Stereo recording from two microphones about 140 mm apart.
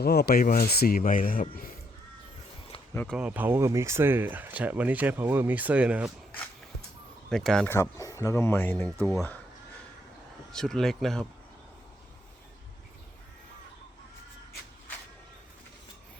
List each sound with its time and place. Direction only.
0.3 s speech: 90° left
2.9 s speech: 10° left (ahead or behind)
3.2 s speech: 10° right (ahead or behind)
7.3 s speech: 5° left (ahead or behind)
7.7 s speech: 20° left (ahead or behind)
10.5 s speech: 5° left (ahead or behind)